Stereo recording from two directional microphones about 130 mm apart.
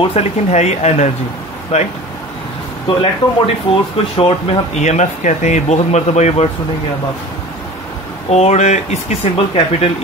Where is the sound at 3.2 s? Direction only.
35° left (ahead or behind).